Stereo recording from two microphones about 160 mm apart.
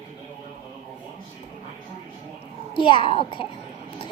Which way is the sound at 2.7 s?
30° left (ahead or behind).